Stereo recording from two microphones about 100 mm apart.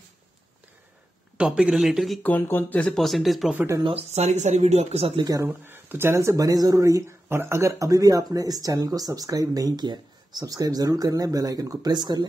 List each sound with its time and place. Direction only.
1.4 s speech: 10° right (ahead or behind)
2.2 s speech: 20° left (ahead or behind)
3.0 s speech: centre (ahead or behind)
3.8 s speech: 85° right
5.1 s speech: 45° right (ahead or behind)
5.4 s speech: 20° right (ahead or behind); by 12.3 s 45° right (ahead or behind)